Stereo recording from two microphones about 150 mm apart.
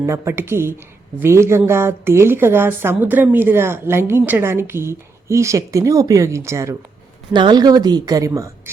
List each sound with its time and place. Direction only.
0.0 s a woman's voice: 20° right (ahead or behind)
7.3 s speech: 30° right (ahead or behind)